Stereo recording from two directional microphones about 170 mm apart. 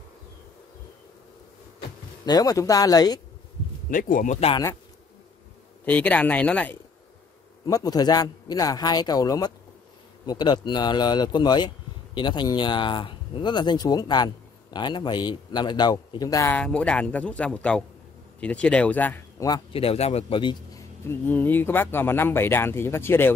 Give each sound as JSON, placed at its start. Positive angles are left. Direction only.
{"t": 2.2, "sound": "speech", "side_deg": 20}
{"t": 3.9, "sound": "speech", "side_deg": 50}
{"t": 4.5, "sound": "speech", "side_deg": 20}
{"t": 5.9, "sound": "speech", "side_deg": 10}
{"t": 7.6, "sound": "speech", "side_deg": 20}
{"t": 19.7, "sound": "a man's voice", "side_deg": 35}
{"t": 21.1, "sound": "speech", "side_deg": 10}